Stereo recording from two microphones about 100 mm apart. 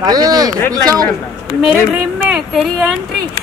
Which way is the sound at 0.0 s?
40° right (ahead or behind).